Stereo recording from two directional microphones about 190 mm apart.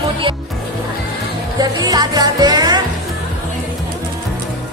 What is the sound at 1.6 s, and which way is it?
Music, 20° right (ahead or behind).